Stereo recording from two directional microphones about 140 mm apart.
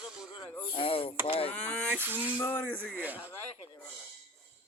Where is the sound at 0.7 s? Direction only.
45° left (ahead or behind).